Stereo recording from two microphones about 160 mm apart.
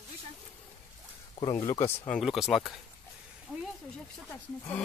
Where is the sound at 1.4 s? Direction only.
20° left (ahead or behind).